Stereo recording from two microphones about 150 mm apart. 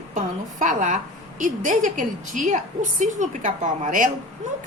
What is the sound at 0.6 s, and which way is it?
A woman's voice, 55° right (ahead or behind).